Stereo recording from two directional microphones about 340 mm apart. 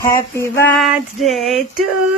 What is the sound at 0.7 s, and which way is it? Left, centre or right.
Female singing, centre.